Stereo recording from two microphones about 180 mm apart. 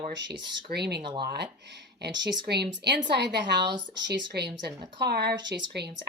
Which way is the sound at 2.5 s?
65° right (ahead or behind).